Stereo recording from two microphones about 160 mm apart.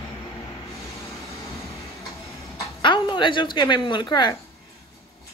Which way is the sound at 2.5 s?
30° left (ahead or behind).